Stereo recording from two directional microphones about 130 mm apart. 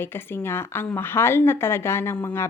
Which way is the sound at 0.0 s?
20° left (ahead or behind).